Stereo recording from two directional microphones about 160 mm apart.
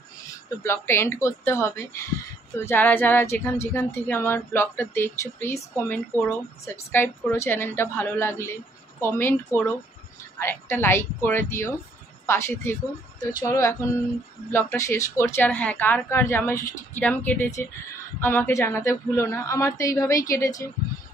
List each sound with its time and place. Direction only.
0.7 s a woman's voice: 15° left (ahead or behind)